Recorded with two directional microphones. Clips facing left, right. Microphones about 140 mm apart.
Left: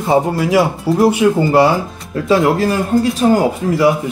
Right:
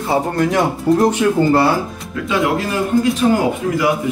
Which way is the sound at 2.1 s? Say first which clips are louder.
Left 5 dB; 35° left (ahead or behind).